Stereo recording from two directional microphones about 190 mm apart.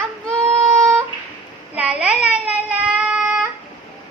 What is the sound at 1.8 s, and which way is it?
Speech, 5° right (ahead or behind).